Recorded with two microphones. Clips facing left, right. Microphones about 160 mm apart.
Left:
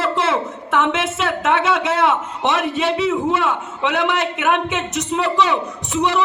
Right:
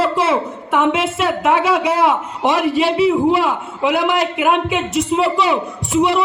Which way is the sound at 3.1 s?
35° right (ahead or behind).